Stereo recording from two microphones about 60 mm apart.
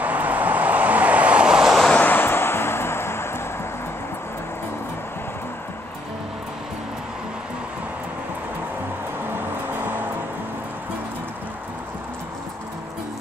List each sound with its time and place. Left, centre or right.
0.0 s vehicle: right; by 1.8 s centre
2.0 s vehicle: left
9.8 s music: right